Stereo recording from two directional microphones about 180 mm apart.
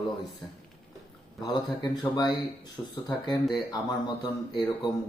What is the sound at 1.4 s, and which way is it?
Speech, 25° left (ahead or behind).